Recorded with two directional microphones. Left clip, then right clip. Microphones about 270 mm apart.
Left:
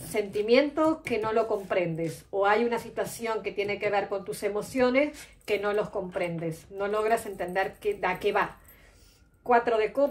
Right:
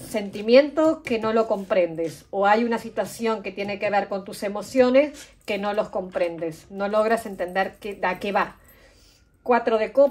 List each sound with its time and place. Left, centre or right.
0.4 s a woman's voice: right
9.5 s a woman's voice: right